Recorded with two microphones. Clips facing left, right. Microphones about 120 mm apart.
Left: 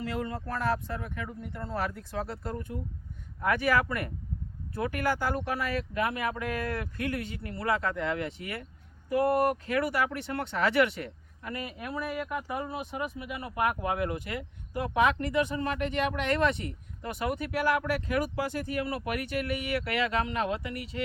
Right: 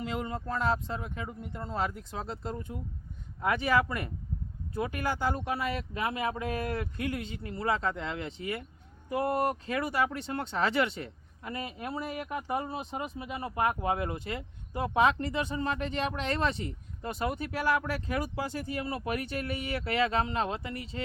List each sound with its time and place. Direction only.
0.0 s speech: 20° right (ahead or behind)
18.8 s speech: 25° right (ahead or behind)